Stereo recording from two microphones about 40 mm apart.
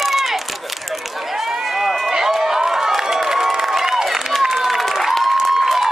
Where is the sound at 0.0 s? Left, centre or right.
Centre.